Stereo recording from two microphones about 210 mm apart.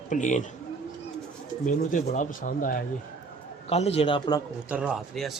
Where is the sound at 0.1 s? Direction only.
35° left (ahead or behind).